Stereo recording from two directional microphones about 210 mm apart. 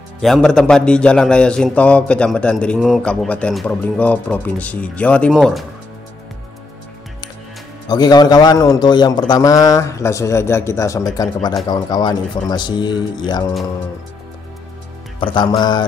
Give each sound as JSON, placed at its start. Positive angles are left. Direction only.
{"t": 0.2, "sound": "a man's voice", "side_deg": 0}
{"t": 7.9, "sound": "a man's voice", "side_deg": 20}
{"t": 15.1, "sound": "a man's voice", "side_deg": 20}